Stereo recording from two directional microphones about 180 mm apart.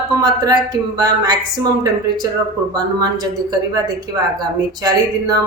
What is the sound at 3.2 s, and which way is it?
Speech, 20° right (ahead or behind).